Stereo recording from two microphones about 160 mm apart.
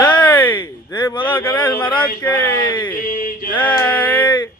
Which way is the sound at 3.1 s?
60° left (ahead or behind).